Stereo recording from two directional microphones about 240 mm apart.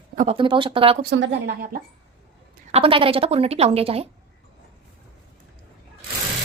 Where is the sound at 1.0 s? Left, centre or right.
Right.